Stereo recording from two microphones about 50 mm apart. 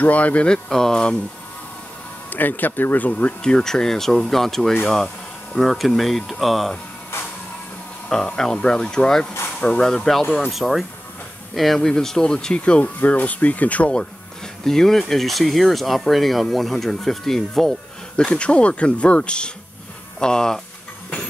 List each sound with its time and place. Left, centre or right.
0.0 s speech: left
0.5 s speech: centre
2.2 s speech: left
3.1 s speech: left
3.4 s speech: centre
8.1 s speech: centre
10.5 s speech: centre
12.5 s speech: left
14.6 s speech: centre
18.1 s speech: left